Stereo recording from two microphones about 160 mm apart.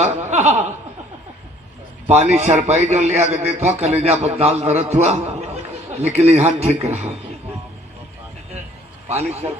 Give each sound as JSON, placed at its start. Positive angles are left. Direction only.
{"t": 0.0, "sound": "chuckle", "side_deg": -45}
{"t": 2.0, "sound": "a man's voice", "side_deg": -45}
{"t": 9.0, "sound": "a man's voice", "side_deg": -40}